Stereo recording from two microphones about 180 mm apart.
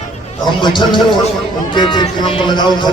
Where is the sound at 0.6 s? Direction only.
25° left (ahead or behind).